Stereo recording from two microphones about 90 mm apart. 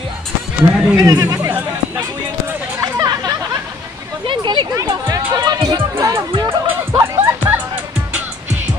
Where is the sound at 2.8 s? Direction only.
45° right (ahead or behind).